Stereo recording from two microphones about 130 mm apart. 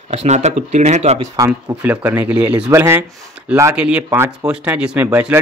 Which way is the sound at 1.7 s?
10° right (ahead or behind).